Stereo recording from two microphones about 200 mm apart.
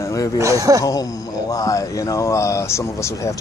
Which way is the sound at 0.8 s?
15° left (ahead or behind).